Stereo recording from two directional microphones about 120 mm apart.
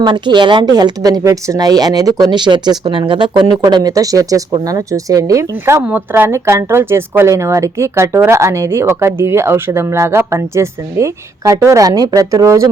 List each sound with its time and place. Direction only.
0.0 s speech: 40° right (ahead or behind)